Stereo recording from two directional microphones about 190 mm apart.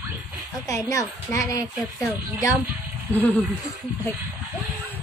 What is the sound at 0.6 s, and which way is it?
A child's voice, 15° left (ahead or behind).